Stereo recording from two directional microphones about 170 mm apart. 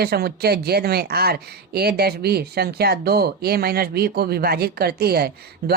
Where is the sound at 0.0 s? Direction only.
65° right (ahead or behind).